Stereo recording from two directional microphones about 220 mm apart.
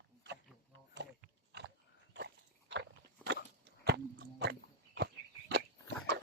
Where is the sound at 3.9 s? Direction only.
50° right (ahead or behind).